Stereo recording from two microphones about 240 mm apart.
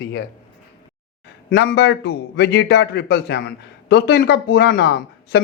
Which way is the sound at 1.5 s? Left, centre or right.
Left.